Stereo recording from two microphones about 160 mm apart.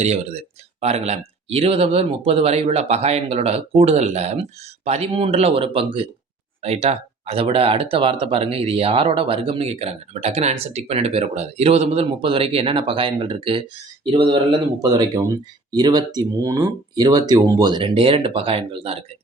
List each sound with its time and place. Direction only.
0.0 s speech: 40° right (ahead or behind)